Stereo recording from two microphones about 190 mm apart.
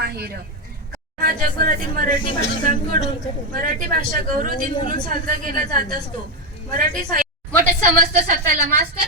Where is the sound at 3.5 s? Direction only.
50° right (ahead or behind).